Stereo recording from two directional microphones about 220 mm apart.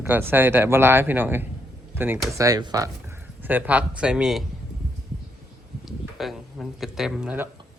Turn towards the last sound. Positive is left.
turn(degrees=-5)  # may be behind; listen again after turning